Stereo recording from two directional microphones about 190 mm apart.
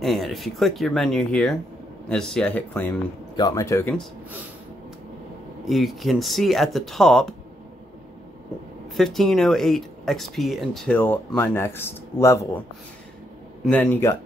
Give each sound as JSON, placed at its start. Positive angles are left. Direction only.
{"t": 0.0, "sound": "speech", "side_deg": 0}
{"t": 3.3, "sound": "speech", "side_deg": 20}
{"t": 5.7, "sound": "speech", "side_deg": 0}
{"t": 8.9, "sound": "speech", "side_deg": 0}
{"t": 13.7, "sound": "speech", "side_deg": 5}